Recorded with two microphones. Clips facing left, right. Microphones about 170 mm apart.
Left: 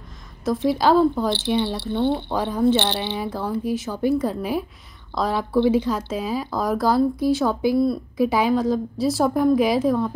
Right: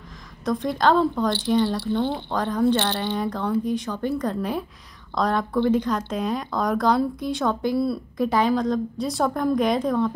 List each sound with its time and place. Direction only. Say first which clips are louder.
0.5 s speech: left 2 dB; 5° left (ahead or behind)
1.8 s speech: left 2 dB; 20° left (ahead or behind)
2.3 s speech: right 1 dB; 10° left (ahead or behind)